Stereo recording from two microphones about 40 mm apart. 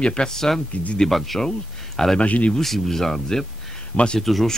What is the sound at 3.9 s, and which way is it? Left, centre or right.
Speech, left.